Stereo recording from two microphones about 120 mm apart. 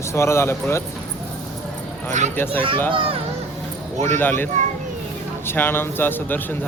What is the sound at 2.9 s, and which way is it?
Speech, 50° right (ahead or behind).